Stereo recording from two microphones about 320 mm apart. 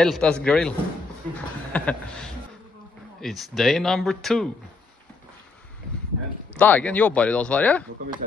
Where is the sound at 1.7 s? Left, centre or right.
Centre.